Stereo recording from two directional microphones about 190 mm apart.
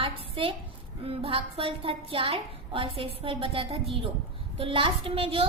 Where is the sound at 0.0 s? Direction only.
30° right (ahead or behind).